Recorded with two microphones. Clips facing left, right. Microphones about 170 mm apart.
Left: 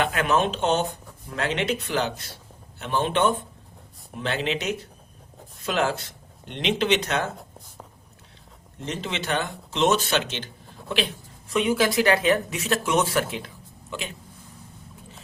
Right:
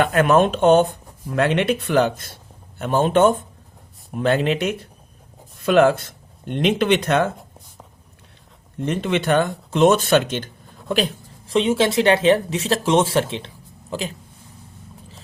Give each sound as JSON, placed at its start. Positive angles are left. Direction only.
{"t": 0.0, "sound": "speech", "side_deg": -50}
{"t": 8.8, "sound": "speech", "side_deg": -55}
{"t": 11.5, "sound": "speech", "side_deg": -25}